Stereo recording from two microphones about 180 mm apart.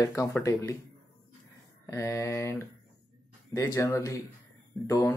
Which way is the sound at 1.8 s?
15° left (ahead or behind).